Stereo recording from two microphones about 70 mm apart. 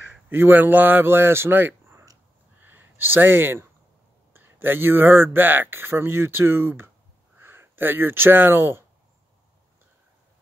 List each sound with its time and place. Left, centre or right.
0.3 s speech: right